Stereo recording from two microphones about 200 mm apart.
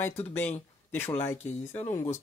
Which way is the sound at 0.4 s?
10° left (ahead or behind).